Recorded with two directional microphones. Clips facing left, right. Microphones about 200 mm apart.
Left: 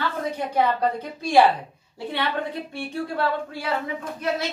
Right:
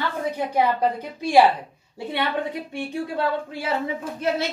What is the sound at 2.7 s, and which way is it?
Speech, 15° right (ahead or behind).